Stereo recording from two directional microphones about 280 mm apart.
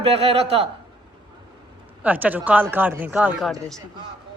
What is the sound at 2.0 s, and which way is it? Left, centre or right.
A man's voice, centre.